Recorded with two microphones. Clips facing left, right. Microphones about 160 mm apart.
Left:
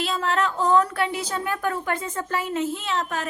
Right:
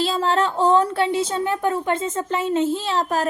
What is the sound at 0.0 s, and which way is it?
Speech, 30° right (ahead or behind).